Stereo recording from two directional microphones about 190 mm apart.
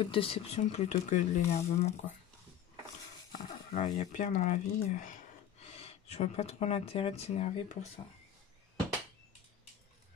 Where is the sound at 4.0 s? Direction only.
40° left (ahead or behind).